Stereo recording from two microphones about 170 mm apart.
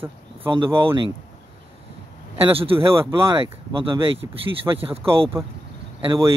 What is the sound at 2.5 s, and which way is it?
Speech, 35° right (ahead or behind).